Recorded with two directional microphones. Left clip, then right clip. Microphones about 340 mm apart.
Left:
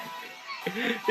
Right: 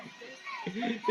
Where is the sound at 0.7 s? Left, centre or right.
Centre.